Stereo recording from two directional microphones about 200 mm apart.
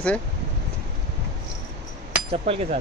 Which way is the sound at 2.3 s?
30° right (ahead or behind).